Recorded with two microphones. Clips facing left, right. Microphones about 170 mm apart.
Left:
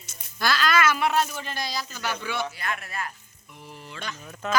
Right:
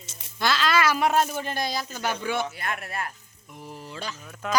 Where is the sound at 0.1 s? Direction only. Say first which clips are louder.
Right 1 dB; 25° right (ahead or behind); by 3.0 s 55° right (ahead or behind).